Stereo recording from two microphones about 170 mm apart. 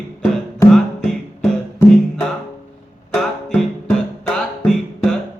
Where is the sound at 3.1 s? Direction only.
Centre (ahead or behind).